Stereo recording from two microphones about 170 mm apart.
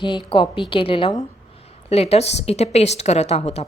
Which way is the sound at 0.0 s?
30° left (ahead or behind).